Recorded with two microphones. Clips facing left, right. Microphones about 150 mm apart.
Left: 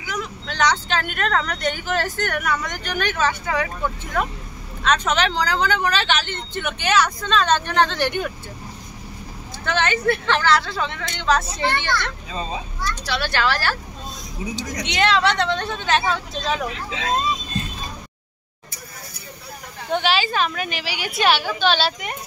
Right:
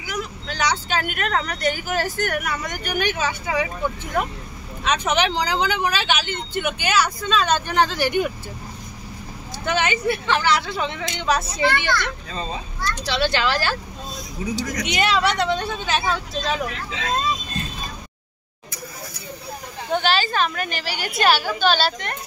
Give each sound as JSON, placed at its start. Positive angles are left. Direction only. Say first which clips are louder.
{"t": 0.0, "sound": "speech", "louder": "even", "side_deg": -5}
{"t": 9.7, "sound": "speech", "louder": "left 1 dB", "side_deg": -15}
{"t": 12.3, "sound": "a child's voice", "louder": "left 1 dB", "side_deg": 10}
{"t": 13.0, "sound": "speech", "louder": "right 1 dB", "side_deg": -20}
{"t": 14.6, "sound": "speech", "louder": "right 2 dB", "side_deg": 20}
{"t": 14.9, "sound": "speech", "louder": "left 2 dB", "side_deg": -10}
{"t": 19.9, "sound": "a woman's voice", "louder": "even", "side_deg": 0}